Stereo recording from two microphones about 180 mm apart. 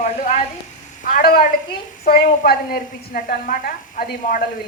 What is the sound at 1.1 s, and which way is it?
A woman's voice, 50° left (ahead or behind).